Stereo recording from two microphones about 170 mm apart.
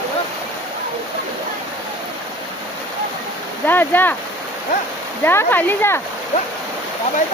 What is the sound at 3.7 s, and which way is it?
Speech, 10° left (ahead or behind).